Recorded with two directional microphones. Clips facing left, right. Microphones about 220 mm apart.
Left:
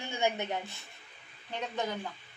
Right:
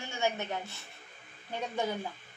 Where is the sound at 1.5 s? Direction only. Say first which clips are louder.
Right 1 dB; 10° right (ahead or behind).